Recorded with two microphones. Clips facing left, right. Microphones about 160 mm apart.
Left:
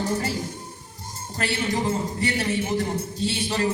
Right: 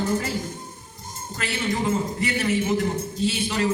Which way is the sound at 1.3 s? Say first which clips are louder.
Left 1 dB; 30° left (ahead or behind).